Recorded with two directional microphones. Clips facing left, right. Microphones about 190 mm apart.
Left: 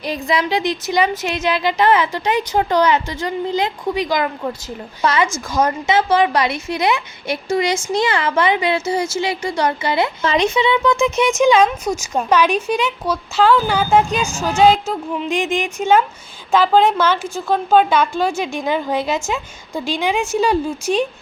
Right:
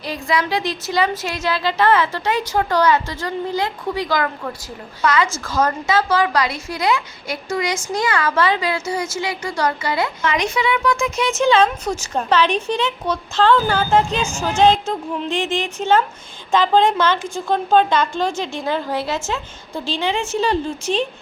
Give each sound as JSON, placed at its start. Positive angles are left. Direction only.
{"t": 0.0, "sound": "a woman's voice", "side_deg": 20}